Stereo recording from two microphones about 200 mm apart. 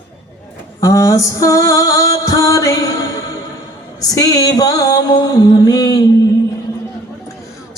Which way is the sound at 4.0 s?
20° left (ahead or behind).